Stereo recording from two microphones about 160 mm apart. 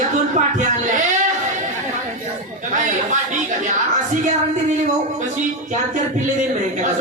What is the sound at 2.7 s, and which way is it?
Speech, 50° right (ahead or behind).